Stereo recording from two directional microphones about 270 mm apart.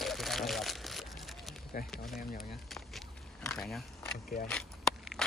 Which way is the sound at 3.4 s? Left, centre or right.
Centre.